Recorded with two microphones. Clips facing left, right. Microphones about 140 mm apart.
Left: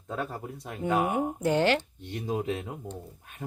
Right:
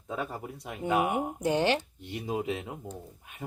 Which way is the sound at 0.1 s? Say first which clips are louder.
Left 1 dB; 5° right (ahead or behind).